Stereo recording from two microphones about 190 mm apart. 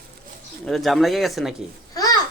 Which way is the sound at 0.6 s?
Centre (ahead or behind).